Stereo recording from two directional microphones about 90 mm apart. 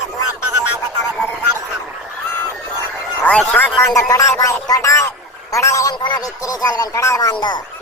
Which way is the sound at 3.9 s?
35° left (ahead or behind).